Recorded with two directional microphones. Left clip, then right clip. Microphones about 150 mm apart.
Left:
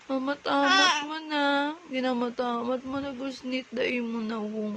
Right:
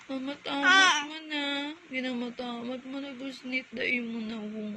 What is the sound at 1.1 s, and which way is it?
Speech, 45° left (ahead or behind).